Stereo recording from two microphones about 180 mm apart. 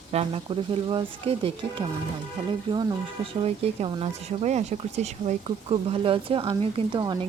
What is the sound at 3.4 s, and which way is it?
Speech, 35° right (ahead or behind).